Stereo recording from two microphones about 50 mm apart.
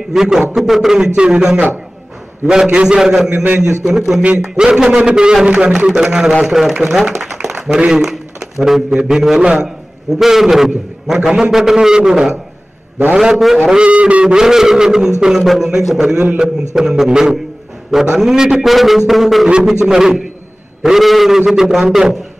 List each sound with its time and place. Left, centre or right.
0.1 s a man's voice: centre
7.4 s a sound: centre
8.0 s a man's voice: centre
13.7 s a man's voice: right
18.7 s music: centre
19.5 s a man's voice: centre
20.8 s music: centre
21.5 s a man's voice: centre